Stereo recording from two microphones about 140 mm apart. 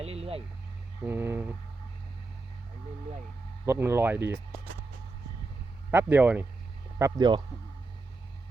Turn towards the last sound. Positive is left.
turn(degrees=-30)  # may be behind; listen again after turning